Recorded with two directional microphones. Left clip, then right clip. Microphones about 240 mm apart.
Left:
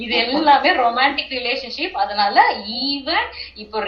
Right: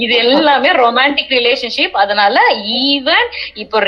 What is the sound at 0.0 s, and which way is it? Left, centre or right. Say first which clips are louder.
A woman's voice: right 7 dB; right.